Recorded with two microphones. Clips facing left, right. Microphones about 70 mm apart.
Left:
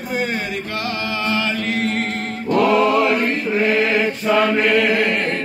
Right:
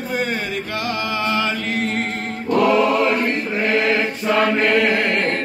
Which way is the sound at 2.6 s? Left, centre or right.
Centre.